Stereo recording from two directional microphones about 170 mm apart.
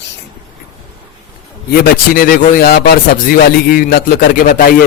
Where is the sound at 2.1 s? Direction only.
60° left (ahead or behind).